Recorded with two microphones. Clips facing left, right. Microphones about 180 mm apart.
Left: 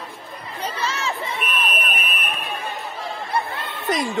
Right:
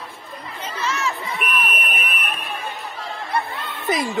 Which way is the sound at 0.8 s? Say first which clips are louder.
Right 3 dB; 30° left (ahead or behind).